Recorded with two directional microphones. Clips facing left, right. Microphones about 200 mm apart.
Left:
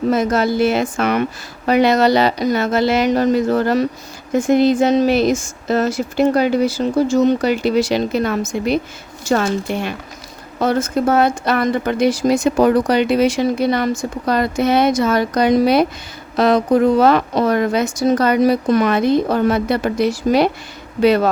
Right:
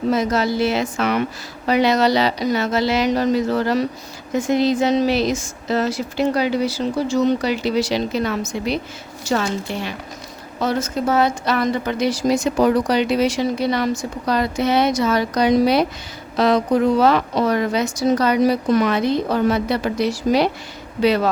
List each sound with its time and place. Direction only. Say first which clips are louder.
0.1 s speech: left 2 dB; 50° left (ahead or behind)